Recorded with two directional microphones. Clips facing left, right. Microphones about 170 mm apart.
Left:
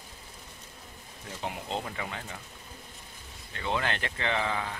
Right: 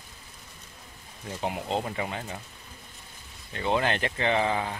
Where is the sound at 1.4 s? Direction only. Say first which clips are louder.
Right 5 dB; 20° right (ahead or behind).